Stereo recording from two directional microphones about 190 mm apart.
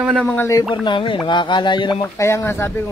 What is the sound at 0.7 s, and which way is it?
Speech, 25° left (ahead or behind).